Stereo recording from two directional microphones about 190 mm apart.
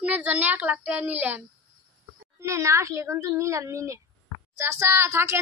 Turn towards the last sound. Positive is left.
turn(degrees=-15)  # may be behind; listen again after turning